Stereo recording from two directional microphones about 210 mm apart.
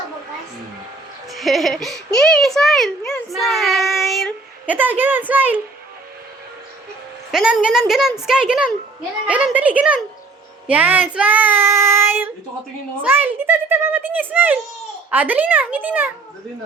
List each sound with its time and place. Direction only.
1.3 s a child's voice: centre (ahead or behind)
7.3 s a child's voice: centre (ahead or behind)